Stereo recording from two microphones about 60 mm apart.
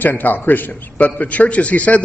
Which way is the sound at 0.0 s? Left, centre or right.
Left.